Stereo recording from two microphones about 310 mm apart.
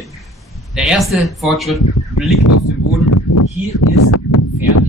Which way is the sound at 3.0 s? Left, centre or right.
Left.